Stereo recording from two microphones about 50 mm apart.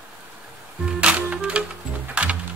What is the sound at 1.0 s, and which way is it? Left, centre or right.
Music, right.